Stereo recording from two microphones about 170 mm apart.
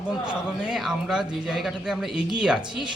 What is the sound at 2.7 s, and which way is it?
Speech, 25° right (ahead or behind).